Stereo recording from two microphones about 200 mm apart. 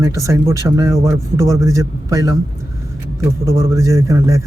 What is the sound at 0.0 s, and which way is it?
Speech, 15° right (ahead or behind).